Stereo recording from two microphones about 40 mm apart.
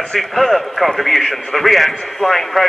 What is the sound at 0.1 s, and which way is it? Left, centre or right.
A man's voice, centre.